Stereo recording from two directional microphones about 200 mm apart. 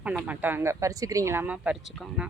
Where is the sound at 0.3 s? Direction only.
10° right (ahead or behind).